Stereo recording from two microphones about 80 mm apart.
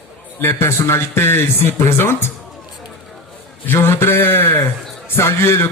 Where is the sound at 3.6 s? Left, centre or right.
Left.